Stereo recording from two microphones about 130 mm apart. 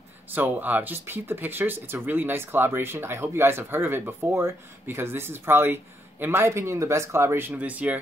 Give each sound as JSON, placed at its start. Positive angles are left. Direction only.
{"t": 0.3, "sound": "speech", "side_deg": -15}